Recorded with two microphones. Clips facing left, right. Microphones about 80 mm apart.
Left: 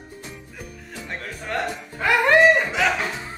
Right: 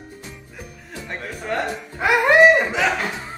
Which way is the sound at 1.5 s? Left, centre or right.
Centre.